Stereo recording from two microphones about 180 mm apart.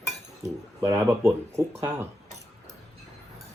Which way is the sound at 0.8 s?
15° right (ahead or behind).